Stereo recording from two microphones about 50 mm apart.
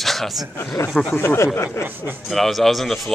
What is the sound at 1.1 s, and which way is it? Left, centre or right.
Speech, left.